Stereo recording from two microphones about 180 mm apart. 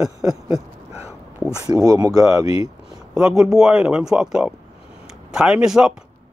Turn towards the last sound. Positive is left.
turn(degrees=-5)  # may be behind; listen again after turning